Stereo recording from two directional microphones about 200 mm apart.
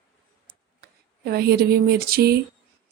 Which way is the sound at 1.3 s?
50° right (ahead or behind).